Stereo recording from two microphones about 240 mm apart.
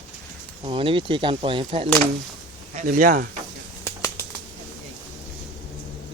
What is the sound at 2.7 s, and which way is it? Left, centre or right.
Speech, right.